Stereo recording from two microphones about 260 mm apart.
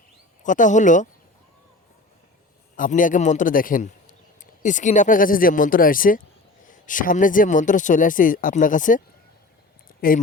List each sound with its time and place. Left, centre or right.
0.4 s speech: left
2.7 s speech: left
10.0 s speech: left